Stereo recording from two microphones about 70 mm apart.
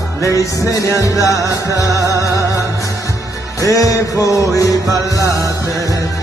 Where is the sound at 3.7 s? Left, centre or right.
Left.